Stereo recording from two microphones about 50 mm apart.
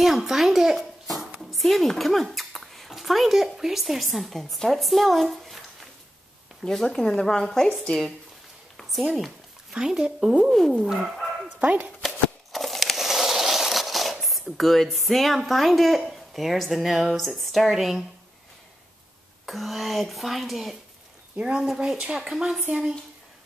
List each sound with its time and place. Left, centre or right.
0.0 s a sound: centre
1.4 s speech: centre
6.6 s speech: centre
8.8 s speech: centre
10.5 s speech: centre
10.8 s speech: centre
12.5 s a sound: centre
14.6 s speech: centre
19.4 s speech: centre
21.4 s speech: centre